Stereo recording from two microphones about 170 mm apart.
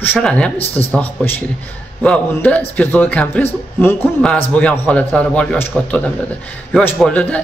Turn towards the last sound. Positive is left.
turn(degrees=5)  # may be behind; listen again after turning